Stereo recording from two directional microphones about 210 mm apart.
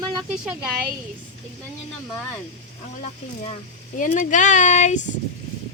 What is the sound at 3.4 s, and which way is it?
Speech, 35° left (ahead or behind).